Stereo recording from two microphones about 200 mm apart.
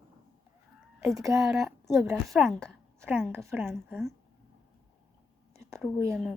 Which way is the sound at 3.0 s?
10° right (ahead or behind).